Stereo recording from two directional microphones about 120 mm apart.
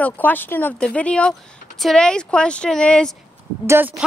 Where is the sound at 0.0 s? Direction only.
15° left (ahead or behind).